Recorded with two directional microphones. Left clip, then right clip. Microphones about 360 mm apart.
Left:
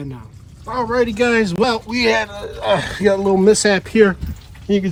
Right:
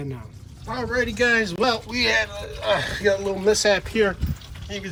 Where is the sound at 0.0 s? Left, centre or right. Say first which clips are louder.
Left 2 dB; centre.